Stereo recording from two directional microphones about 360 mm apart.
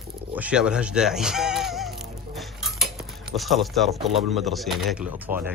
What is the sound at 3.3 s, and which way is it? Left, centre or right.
Speech, centre.